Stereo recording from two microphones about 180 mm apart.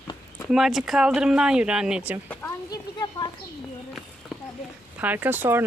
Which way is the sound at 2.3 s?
15° left (ahead or behind).